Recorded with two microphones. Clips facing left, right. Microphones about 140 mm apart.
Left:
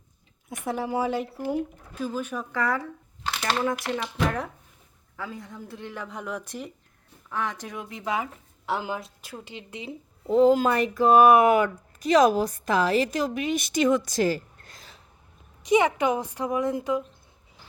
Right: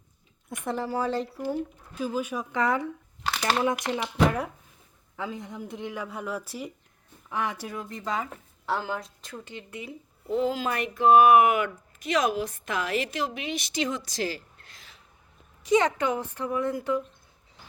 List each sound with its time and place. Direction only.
0.6 s a woman's voice: 5° left (ahead or behind)
2.0 s speech: 10° right (ahead or behind)
2.6 s speech: 20° right (ahead or behind)
4.0 s speech: 5° right (ahead or behind)
5.1 s a woman's voice: 20° right (ahead or behind); by 9.9 s 20° left (ahead or behind)
10.2 s speech: 40° left (ahead or behind)
15.6 s a woman's voice: 15° left (ahead or behind)